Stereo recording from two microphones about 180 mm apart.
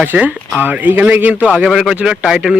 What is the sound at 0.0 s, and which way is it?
A man's voice, 10° right (ahead or behind).